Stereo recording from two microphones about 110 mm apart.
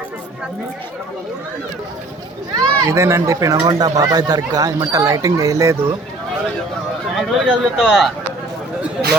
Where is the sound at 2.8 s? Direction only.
25° right (ahead or behind).